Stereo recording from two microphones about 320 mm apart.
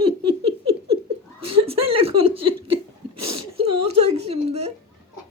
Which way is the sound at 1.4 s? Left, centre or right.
Right.